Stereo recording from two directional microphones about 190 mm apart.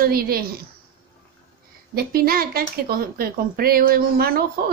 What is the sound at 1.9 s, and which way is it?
Speech, 50° right (ahead or behind).